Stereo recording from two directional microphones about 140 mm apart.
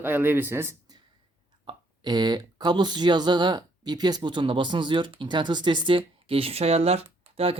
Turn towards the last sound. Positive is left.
turn(degrees=-45)  # may be behind; listen again after turning